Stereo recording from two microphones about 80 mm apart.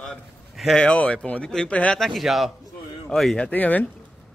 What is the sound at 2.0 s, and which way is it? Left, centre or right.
Speech, centre.